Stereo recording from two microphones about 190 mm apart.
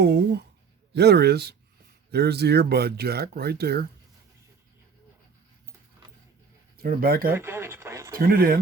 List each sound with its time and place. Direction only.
0.0 s speech: 60° right (ahead or behind)
6.7 s speech: 50° right (ahead or behind)
7.3 s speech: 10° right (ahead or behind)
8.1 s speech: 50° right (ahead or behind)